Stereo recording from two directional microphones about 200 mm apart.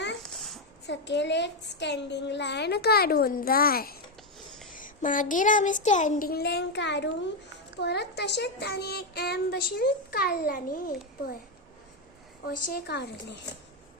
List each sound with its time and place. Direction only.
0.2 s a sound: centre (ahead or behind)
0.9 s a woman's voice: 60° left (ahead or behind)
12.5 s a woman's voice: 50° left (ahead or behind)